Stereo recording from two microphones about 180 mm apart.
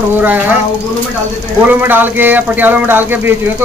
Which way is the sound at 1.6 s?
10° right (ahead or behind).